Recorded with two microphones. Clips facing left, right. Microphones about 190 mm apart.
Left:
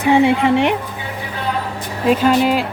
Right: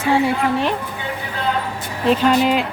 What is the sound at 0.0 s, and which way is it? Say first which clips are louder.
Speech: left 4 dB; 20° left (ahead or behind).